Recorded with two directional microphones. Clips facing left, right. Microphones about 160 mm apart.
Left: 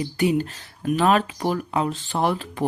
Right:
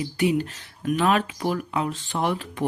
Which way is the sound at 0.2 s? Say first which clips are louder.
Left 1 dB; 40° left (ahead or behind).